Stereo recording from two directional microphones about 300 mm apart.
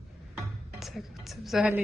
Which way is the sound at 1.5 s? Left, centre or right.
Centre.